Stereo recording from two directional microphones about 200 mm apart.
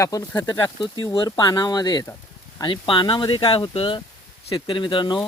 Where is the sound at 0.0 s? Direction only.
15° left (ahead or behind).